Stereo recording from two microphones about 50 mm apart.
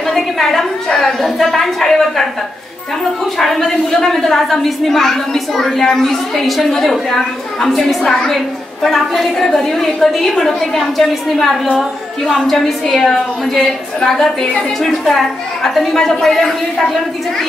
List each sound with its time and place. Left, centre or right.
0.0 s a woman's voice: centre
3.3 s a woman's voice: centre